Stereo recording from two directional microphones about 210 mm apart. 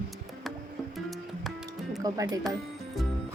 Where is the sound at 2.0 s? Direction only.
15° right (ahead or behind).